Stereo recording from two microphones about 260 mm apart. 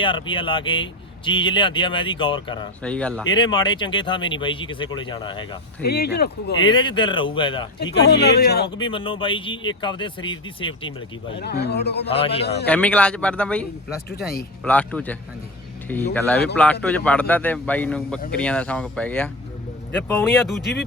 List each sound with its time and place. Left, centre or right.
0.0 s speech: centre
2.8 s speech: centre
3.2 s speech: centre
5.8 s speech: left
6.6 s speech: centre
7.8 s speech: left
8.8 s speech: centre
11.3 s speech: left
12.0 s speech: left
12.4 s speech: left
12.6 s speech: centre